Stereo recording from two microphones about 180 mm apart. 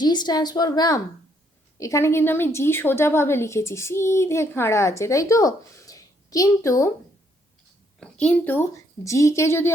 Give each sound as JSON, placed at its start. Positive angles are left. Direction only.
{"t": 0.0, "sound": "a woman's voice", "side_deg": 25}
{"t": 7.9, "sound": "a woman's voice", "side_deg": 5}